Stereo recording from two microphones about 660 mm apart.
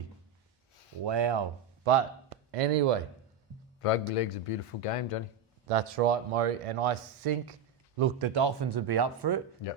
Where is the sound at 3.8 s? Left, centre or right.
Left.